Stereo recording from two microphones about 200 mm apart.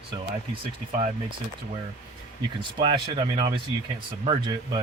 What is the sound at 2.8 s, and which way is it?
Speech, 25° right (ahead or behind).